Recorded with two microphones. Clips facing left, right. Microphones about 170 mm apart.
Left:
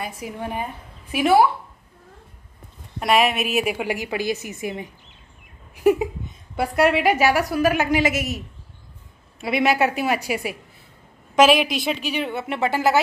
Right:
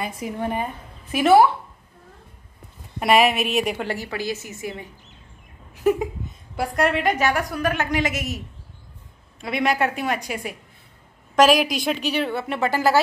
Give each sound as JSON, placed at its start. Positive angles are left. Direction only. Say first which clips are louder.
{"t": 0.0, "sound": "a woman's voice", "louder": "right 3 dB", "side_deg": 5}
{"t": 3.0, "sound": "a woman's voice", "louder": "right 1 dB", "side_deg": 0}
{"t": 5.9, "sound": "a sound", "louder": "left 3 dB", "side_deg": 10}
{"t": 6.5, "sound": "a woman's voice", "louder": "left 3 dB", "side_deg": 5}
{"t": 9.4, "sound": "a woman's voice", "louder": "left 2 dB", "side_deg": 5}
{"t": 12.1, "sound": "speech", "louder": "right 2 dB", "side_deg": 15}